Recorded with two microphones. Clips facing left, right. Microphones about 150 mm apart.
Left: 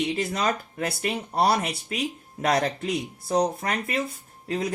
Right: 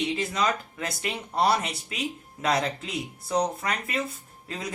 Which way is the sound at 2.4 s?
50° left (ahead or behind).